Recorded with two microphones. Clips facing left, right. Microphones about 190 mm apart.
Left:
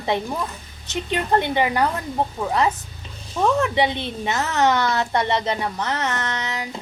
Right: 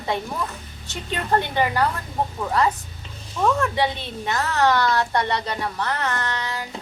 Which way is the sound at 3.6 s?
20° left (ahead or behind).